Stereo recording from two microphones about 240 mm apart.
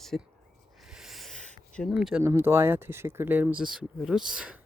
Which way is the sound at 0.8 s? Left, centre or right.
Centre.